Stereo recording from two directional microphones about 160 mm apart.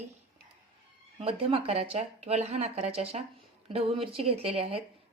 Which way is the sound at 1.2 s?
35° right (ahead or behind).